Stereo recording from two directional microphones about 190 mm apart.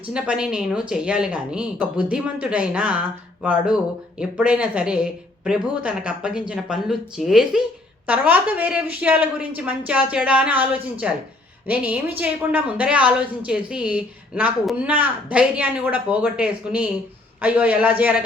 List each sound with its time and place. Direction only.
0.1 s a woman's voice: 5° right (ahead or behind)